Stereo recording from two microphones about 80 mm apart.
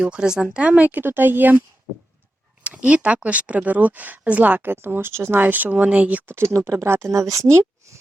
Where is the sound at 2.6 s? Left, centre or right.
Centre.